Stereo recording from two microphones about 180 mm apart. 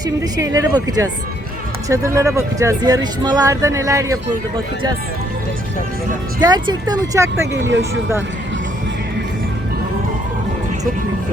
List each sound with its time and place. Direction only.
0.0 s a woman's voice: 20° right (ahead or behind)
6.4 s a woman's voice: 20° right (ahead or behind)
7.5 s speech: 90° right